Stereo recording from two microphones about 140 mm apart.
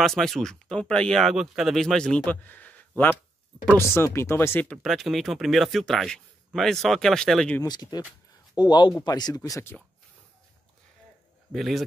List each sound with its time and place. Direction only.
0.0 s speech: centre (ahead or behind)
3.7 s speech: 20° left (ahead or behind)
7.6 s speech: 30° left (ahead or behind)
11.5 s speech: centre (ahead or behind)